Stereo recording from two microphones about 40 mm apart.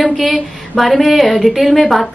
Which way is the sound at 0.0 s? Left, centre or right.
Centre.